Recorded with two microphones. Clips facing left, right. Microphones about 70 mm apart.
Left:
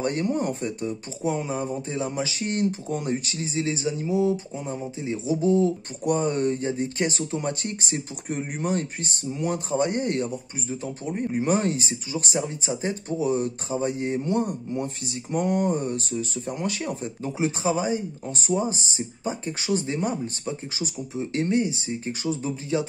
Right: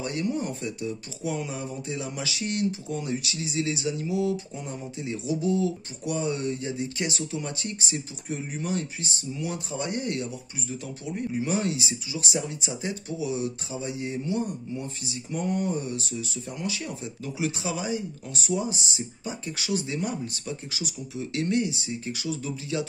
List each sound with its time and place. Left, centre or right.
0.0 s speech: left